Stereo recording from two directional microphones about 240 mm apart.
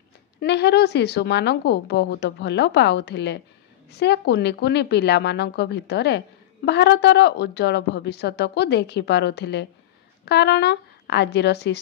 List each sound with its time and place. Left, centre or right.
0.4 s a woman's voice: left